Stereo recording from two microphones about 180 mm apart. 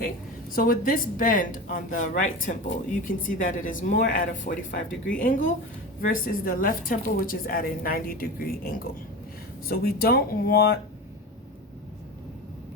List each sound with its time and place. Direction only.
0.5 s a woman's voice: 50° left (ahead or behind)